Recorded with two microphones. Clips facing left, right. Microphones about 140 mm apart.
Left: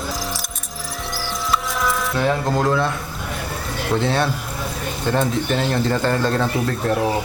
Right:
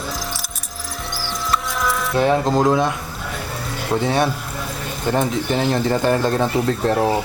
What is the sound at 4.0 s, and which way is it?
Speech, 15° right (ahead or behind).